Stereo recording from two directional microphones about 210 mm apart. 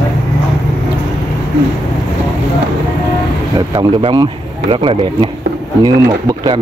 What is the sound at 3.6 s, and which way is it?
Speech, 20° right (ahead or behind).